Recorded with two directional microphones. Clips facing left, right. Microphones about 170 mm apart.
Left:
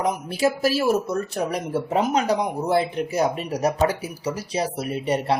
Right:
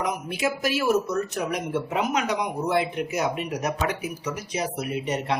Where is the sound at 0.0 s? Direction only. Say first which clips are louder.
Left 4 dB; 30° left (ahead or behind).